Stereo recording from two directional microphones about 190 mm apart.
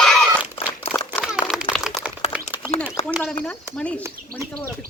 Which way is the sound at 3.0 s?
35° left (ahead or behind).